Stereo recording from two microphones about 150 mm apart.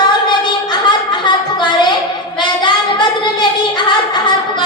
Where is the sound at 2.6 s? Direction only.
30° left (ahead or behind).